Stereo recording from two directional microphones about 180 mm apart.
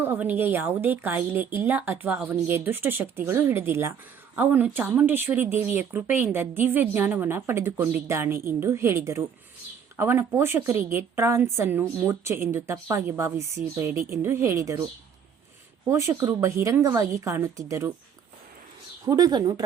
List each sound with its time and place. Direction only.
0.0 s speech: 10° right (ahead or behind)
15.9 s speech: 15° right (ahead or behind)
19.0 s speech: 20° right (ahead or behind)